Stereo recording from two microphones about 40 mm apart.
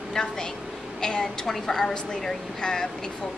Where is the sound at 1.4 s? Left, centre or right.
Centre.